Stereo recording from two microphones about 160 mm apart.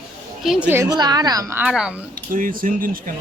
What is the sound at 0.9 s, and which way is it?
Speech, 25° right (ahead or behind).